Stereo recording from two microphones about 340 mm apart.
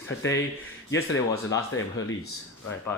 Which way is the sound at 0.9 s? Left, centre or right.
Left.